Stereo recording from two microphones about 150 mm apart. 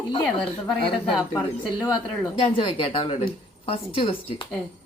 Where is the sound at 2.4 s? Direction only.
40° left (ahead or behind).